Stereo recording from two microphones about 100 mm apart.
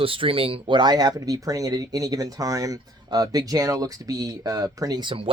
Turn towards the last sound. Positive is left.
turn(degrees=-65)  # may be behind; listen again after turning